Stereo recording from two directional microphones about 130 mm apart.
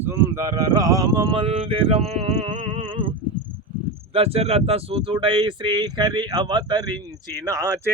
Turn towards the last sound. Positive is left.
turn(degrees=-25)  # may be behind; listen again after turning